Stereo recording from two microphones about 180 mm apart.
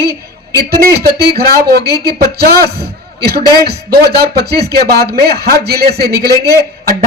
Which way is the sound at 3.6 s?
60° right (ahead or behind).